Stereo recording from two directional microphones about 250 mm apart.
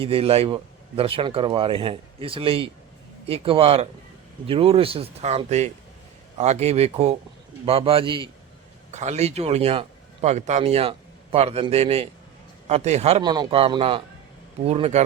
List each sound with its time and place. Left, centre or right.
0.0 s a man's voice: right